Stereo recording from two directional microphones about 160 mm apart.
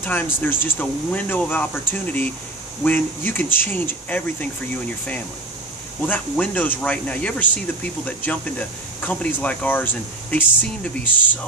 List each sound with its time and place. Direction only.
0.0 s speech: 10° left (ahead or behind)
6.0 s speech: 10° left (ahead or behind)